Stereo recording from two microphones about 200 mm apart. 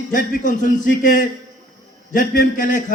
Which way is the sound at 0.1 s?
40° left (ahead or behind).